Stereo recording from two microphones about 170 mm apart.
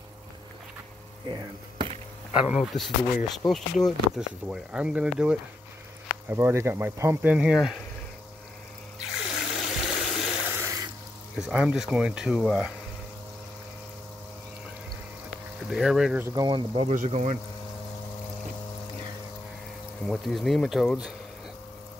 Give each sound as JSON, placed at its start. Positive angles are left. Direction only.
{"t": 1.3, "sound": "speech", "side_deg": -25}
{"t": 2.3, "sound": "speech", "side_deg": -5}
{"t": 9.1, "sound": "water", "side_deg": 0}
{"t": 10.6, "sound": "water", "side_deg": -20}
{"t": 11.3, "sound": "speech", "side_deg": -5}
{"t": 15.7, "sound": "speech", "side_deg": 0}
{"t": 16.2, "sound": "speech", "side_deg": -15}
{"t": 16.4, "sound": "speech", "side_deg": -30}
{"t": 16.9, "sound": "speech", "side_deg": -45}
{"t": 20.1, "sound": "speech", "side_deg": 0}